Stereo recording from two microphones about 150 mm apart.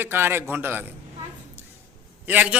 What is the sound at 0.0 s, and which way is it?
Speech, 15° right (ahead or behind).